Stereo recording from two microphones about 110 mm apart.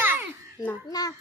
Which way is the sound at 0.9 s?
35° left (ahead or behind).